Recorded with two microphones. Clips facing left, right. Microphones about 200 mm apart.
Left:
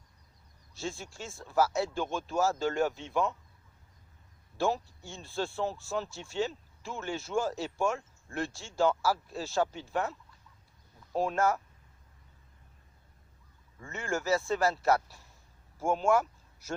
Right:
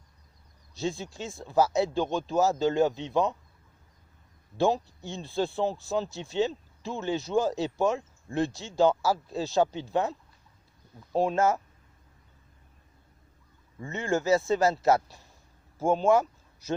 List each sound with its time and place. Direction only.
0.8 s speech: 20° right (ahead or behind)
4.5 s speech: 20° right (ahead or behind)
11.1 s speech: 30° right (ahead or behind)
11.3 s speech: 20° right (ahead or behind)
13.8 s speech: 20° right (ahead or behind)
15.8 s speech: 35° right (ahead or behind)